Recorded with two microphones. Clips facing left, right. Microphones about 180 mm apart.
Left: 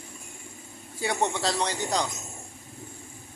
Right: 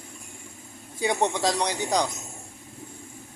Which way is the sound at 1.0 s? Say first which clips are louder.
Right 3 dB; 20° right (ahead or behind).